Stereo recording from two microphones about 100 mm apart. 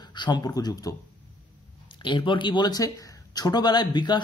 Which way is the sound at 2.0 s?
55° left (ahead or behind).